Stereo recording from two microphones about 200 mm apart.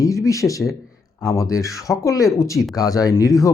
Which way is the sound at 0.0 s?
15° left (ahead or behind).